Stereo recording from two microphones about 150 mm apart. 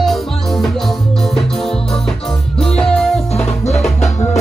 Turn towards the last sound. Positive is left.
turn(degrees=45)  # may be behind; listen again after turning